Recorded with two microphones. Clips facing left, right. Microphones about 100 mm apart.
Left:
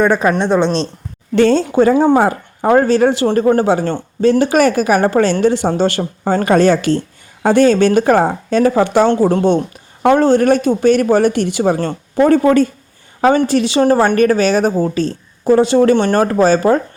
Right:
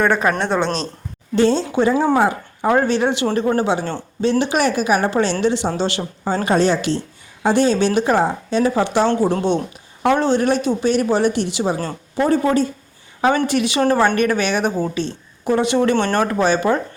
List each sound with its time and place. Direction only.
0.0 s speech: 15° left (ahead or behind)
1.4 s a woman's voice: 55° left (ahead or behind)
13.2 s a woman's voice: 35° left (ahead or behind)